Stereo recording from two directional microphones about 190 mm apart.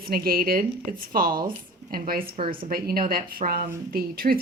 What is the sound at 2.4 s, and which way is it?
Speech, 30° right (ahead or behind).